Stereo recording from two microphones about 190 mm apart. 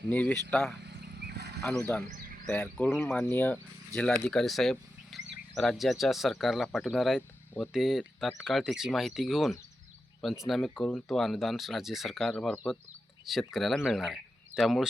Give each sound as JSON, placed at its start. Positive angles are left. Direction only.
{"t": 0.1, "sound": "speech", "side_deg": 10}
{"t": 0.9, "sound": "wild animals", "side_deg": -60}
{"t": 1.7, "sound": "speech", "side_deg": 5}
{"t": 2.0, "sound": "a sound", "side_deg": -40}
{"t": 2.5, "sound": "speech", "side_deg": 5}
{"t": 7.2, "sound": "a sound", "side_deg": 10}
{"t": 7.7, "sound": "speech", "side_deg": 0}